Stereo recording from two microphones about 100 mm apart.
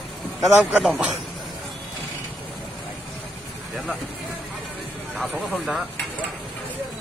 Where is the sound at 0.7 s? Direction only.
10° right (ahead or behind).